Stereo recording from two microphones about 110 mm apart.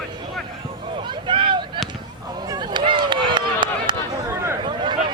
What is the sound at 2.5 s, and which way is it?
Run, 40° right (ahead or behind).